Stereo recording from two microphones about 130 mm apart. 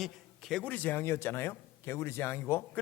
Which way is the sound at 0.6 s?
15° left (ahead or behind).